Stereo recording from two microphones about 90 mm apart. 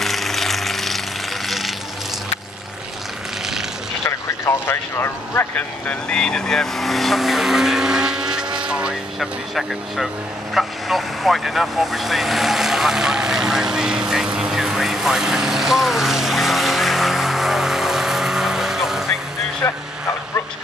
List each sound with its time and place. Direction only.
0.0 s vehicle: centre (ahead or behind)
4.0 s speech: 30° left (ahead or behind)
5.9 s vehicle: 10° left (ahead or behind); by 8.9 s 10° right (ahead or behind)
9.2 s speech: centre (ahead or behind)
10.5 s vehicle: centre (ahead or behind)
19.6 s vehicle: 30° left (ahead or behind)